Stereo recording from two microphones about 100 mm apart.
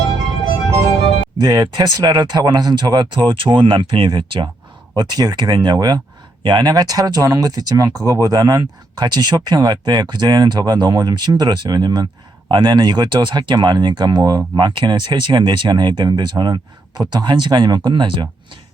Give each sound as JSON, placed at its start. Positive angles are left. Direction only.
{"t": 1.4, "sound": "speech", "side_deg": -45}
{"t": 4.9, "sound": "speech", "side_deg": -40}
{"t": 14.2, "sound": "speech", "side_deg": -35}